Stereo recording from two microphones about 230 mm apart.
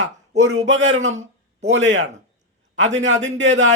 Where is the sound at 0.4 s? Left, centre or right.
Right.